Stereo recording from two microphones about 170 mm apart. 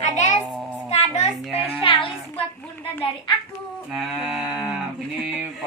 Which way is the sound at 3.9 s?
5° right (ahead or behind).